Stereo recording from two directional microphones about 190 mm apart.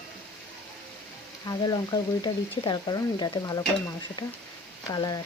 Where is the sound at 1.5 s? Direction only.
20° left (ahead or behind).